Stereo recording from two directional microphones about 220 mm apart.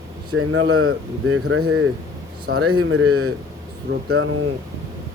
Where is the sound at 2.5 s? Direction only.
90° right.